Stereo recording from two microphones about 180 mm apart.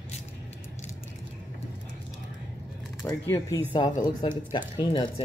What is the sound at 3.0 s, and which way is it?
A woman's voice, 15° left (ahead or behind).